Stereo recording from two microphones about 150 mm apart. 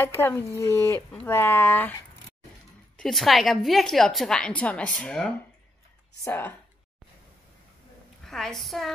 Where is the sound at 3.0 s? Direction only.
Centre (ahead or behind).